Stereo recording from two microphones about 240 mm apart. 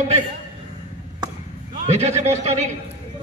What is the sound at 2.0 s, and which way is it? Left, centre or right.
Speech, right.